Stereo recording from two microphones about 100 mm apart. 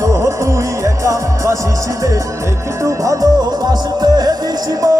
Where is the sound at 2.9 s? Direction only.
35° right (ahead or behind).